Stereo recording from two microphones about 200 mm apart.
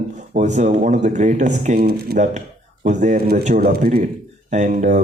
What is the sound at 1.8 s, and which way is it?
Speech, 50° right (ahead or behind).